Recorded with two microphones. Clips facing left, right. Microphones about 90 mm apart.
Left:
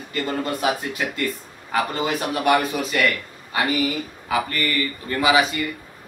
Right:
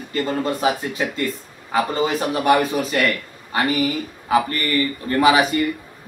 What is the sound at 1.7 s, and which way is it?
A man's voice, 30° right (ahead or behind).